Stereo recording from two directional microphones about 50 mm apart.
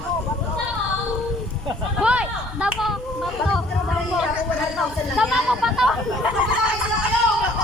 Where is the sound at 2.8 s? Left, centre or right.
Centre.